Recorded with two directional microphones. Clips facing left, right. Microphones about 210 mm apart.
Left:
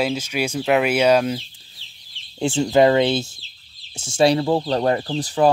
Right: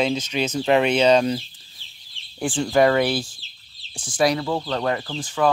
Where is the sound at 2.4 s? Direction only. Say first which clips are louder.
Left 3 dB; 25° left (ahead or behind).